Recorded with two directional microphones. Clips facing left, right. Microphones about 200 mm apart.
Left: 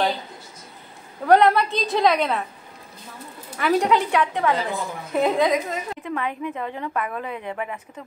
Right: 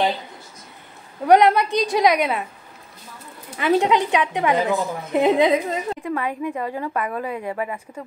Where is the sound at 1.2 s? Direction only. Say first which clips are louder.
Right 1 dB; 15° right (ahead or behind).